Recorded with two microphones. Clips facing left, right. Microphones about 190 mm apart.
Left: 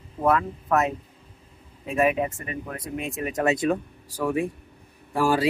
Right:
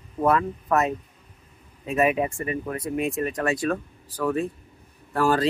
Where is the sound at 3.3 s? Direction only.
20° left (ahead or behind).